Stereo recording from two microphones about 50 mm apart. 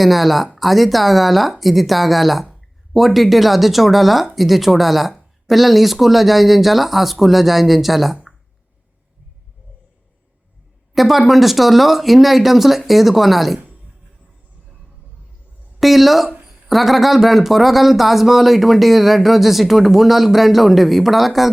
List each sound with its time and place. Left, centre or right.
0.0 s speech: centre
10.9 s speech: centre
15.8 s speech: centre
16.3 s a sound: centre
16.6 s speech: centre